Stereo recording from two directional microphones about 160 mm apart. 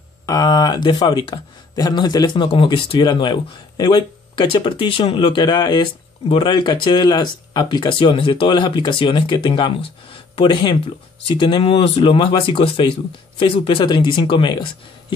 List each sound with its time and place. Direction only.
0.3 s speech: 25° left (ahead or behind)